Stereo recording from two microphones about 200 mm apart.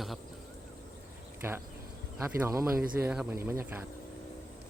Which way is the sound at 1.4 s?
10° right (ahead or behind).